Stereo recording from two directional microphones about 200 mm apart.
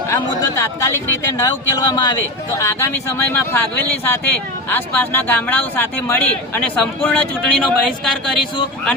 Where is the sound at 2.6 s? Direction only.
15° left (ahead or behind).